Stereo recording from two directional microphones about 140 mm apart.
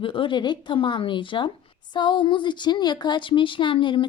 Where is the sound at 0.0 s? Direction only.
35° left (ahead or behind).